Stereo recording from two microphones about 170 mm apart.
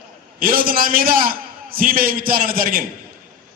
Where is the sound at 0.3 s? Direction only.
60° right (ahead or behind).